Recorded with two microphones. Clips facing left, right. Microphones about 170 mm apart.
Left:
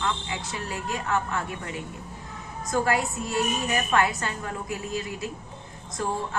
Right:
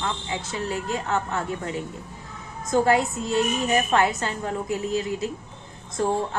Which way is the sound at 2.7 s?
25° right (ahead or behind).